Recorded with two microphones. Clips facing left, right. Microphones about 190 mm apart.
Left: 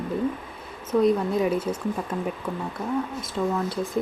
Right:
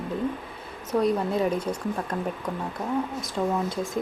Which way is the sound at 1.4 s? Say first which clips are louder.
Left 2 dB; 5° left (ahead or behind).